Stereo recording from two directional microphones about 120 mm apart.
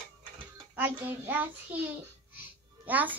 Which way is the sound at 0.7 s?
15° right (ahead or behind).